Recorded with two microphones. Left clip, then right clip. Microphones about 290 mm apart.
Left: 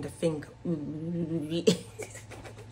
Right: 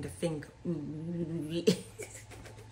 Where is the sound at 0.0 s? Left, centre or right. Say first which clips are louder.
Left 5 dB; centre.